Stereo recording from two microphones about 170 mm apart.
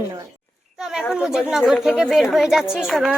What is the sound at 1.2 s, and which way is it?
Speech, 5° right (ahead or behind).